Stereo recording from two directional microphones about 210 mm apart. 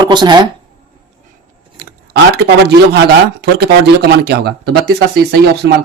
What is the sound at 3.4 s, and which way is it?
Speech, 50° right (ahead or behind).